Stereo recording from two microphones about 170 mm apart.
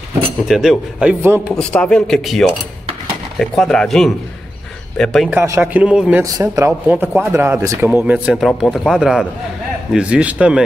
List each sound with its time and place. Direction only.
0.5 s speech: centre (ahead or behind)
1.5 s speech: 5° left (ahead or behind)
5.3 s a man's voice: 10° right (ahead or behind)
6.2 s a man's voice: 20° right (ahead or behind)